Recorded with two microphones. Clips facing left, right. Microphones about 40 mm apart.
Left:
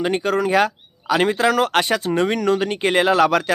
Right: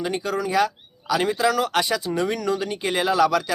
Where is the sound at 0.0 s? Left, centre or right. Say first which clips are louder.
Left 6 dB; left.